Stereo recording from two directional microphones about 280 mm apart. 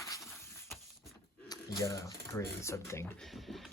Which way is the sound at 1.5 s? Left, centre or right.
Centre.